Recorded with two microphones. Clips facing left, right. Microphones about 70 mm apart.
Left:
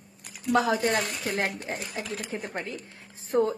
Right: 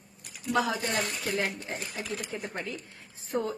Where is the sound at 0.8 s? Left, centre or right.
Left.